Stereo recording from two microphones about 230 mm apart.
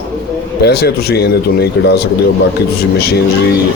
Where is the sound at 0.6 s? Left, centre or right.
Left.